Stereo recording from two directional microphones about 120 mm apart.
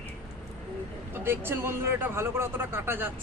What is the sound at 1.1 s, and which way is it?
Speech, 20° right (ahead or behind).